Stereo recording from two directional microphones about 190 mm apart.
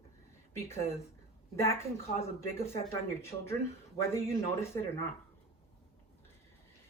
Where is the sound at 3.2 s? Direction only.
15° left (ahead or behind).